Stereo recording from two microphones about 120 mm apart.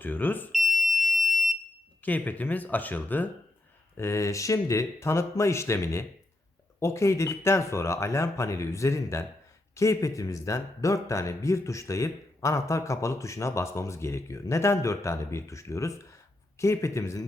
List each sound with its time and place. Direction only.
0.0 s speech: 15° left (ahead or behind)
0.5 s smoke detector: centre (ahead or behind)
2.0 s speech: 15° left (ahead or behind)